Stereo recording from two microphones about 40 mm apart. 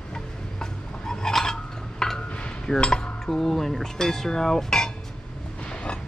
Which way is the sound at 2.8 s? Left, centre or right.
Centre.